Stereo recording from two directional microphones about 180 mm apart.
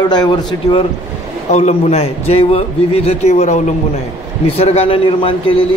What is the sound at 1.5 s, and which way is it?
A man's voice, 40° left (ahead or behind).